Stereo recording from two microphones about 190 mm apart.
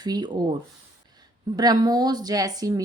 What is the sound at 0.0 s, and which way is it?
Speech, 20° right (ahead or behind).